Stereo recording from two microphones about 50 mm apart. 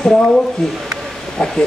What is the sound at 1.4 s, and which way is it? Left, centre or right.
Speech, left.